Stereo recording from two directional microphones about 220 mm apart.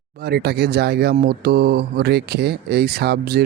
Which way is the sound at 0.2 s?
50° right (ahead or behind).